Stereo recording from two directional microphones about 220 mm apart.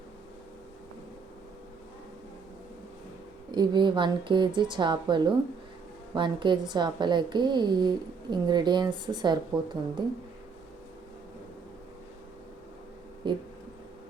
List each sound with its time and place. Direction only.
3.5 s speech: 20° right (ahead or behind)
13.2 s speech: 20° right (ahead or behind)